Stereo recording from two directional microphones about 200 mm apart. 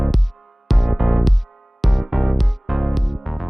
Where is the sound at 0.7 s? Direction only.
Centre (ahead or behind).